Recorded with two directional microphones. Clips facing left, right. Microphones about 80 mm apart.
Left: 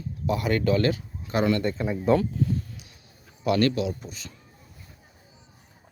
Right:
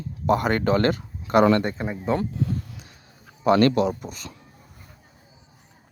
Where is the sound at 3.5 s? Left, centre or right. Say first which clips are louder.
Right 5 dB; right.